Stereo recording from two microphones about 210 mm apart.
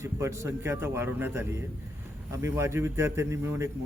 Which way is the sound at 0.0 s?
15° right (ahead or behind).